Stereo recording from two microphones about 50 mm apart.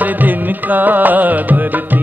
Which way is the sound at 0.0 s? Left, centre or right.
Right.